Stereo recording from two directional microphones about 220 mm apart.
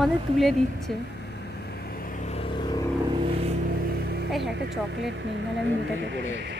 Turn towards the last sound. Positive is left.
turn(degrees=-50)  # may be behind; listen again after turning